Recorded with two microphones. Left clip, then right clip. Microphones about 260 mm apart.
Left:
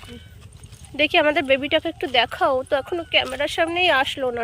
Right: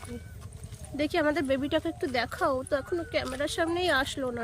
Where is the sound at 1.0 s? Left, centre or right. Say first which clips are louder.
Left 9 dB; left.